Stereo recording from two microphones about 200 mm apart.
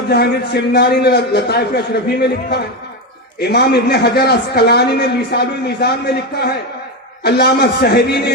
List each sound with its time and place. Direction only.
0.1 s a man's voice: 55° left (ahead or behind)